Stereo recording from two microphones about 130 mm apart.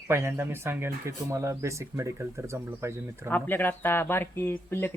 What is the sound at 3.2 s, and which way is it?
Speech, 15° left (ahead or behind).